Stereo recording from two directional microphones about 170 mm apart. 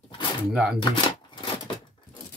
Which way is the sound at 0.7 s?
30° left (ahead or behind).